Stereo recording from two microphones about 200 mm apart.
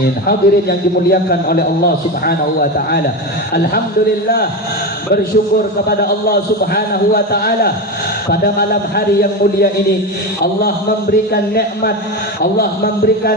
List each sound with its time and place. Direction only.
0.3 s a man's voice: 50° left (ahead or behind)
5.9 s a man's voice: 50° left (ahead or behind)